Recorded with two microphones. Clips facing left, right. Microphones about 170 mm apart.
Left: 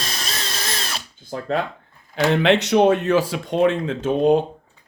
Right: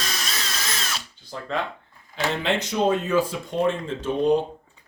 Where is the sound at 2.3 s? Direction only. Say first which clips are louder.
Left 10 dB; 70° left (ahead or behind).